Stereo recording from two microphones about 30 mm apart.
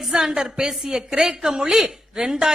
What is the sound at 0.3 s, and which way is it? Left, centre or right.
A woman's voice, right.